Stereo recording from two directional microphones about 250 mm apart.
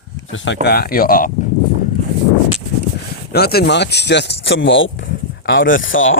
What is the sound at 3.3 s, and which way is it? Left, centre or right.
Speech, left.